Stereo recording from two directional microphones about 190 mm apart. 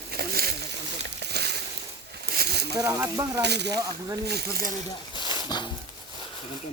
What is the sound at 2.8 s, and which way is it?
Sizzle, 15° right (ahead or behind).